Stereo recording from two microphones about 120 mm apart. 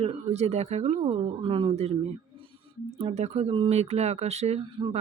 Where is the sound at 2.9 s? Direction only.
65° right (ahead or behind).